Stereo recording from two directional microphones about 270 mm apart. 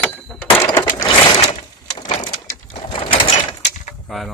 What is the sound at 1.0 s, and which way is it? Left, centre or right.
Sewing machine, left.